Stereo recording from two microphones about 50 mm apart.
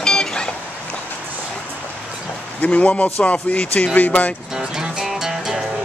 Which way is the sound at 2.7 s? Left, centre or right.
Left.